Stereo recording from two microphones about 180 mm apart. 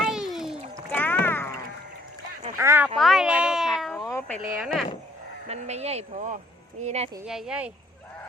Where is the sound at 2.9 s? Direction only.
Centre (ahead or behind).